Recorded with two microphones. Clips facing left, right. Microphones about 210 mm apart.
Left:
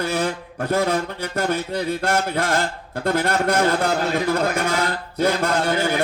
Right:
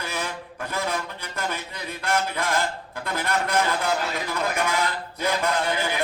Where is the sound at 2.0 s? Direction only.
45° left (ahead or behind).